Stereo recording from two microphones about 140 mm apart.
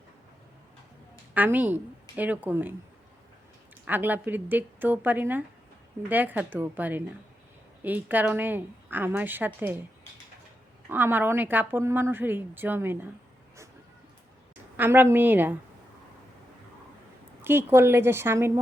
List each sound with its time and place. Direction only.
1.3 s a woman's voice: 10° right (ahead or behind)
3.8 s a woman's voice: 15° right (ahead or behind)
10.8 s a woman's voice: 15° right (ahead or behind)
14.8 s a woman's voice: 15° right (ahead or behind)
17.4 s a woman's voice: 15° right (ahead or behind)